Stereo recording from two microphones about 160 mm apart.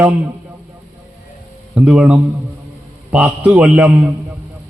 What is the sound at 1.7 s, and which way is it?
A man's voice, 5° right (ahead or behind).